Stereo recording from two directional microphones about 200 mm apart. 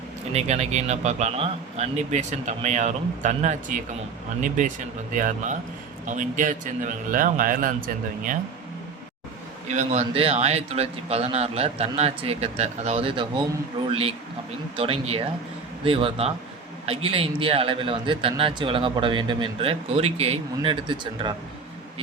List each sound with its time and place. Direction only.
0.3 s a man's voice: 35° right (ahead or behind)
9.6 s a man's voice: 35° right (ahead or behind)